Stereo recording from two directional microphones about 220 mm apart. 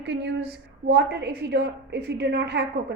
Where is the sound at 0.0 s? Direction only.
50° right (ahead or behind).